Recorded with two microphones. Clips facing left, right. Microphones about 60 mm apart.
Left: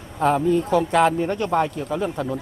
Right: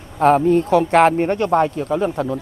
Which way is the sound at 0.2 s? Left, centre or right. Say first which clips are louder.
Right 5 dB; right.